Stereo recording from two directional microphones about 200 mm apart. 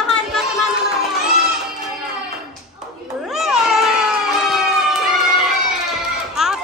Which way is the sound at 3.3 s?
Centre (ahead or behind).